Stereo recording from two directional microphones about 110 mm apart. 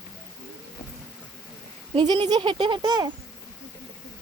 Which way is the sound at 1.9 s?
45° right (ahead or behind).